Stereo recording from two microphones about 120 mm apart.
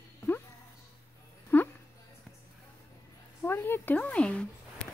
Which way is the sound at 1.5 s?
15° left (ahead or behind).